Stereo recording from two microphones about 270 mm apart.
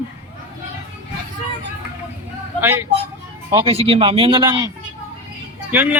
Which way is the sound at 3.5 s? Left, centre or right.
Right.